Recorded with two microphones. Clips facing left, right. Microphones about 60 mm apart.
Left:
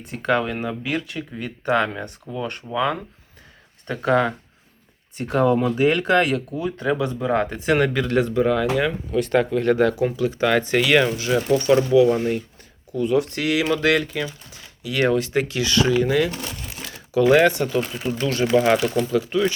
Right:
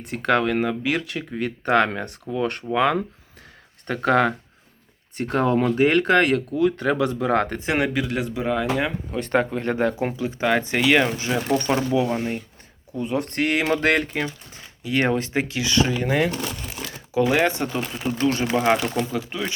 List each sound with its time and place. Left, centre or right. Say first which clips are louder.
0.0 s speech: right 1 dB; right
3.8 s speech: even; right
5.1 s speech: left 2 dB; right
6.6 s speech: right 4 dB; right
7.6 s speech: left 4 dB; right
7.9 s speech: left 5 dB; centre
9.1 s speech: left 3 dB; right
13.2 s speech: even; right; by 15.9 s centre
16.0 s speech: left 1 dB; right
17.1 s speech: left 4 dB; right